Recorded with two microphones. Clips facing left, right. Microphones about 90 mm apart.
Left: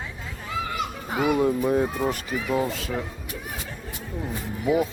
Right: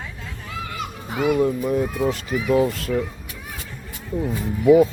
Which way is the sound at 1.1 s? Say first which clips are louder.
Right 2 dB; 5° left (ahead or behind).